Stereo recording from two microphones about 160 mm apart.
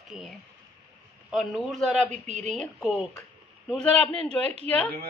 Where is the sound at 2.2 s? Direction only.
45° right (ahead or behind).